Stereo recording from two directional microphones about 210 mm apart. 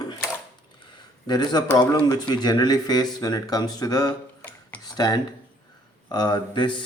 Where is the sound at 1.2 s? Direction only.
20° left (ahead or behind).